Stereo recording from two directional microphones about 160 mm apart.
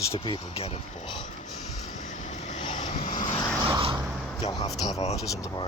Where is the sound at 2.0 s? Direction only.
50° left (ahead or behind).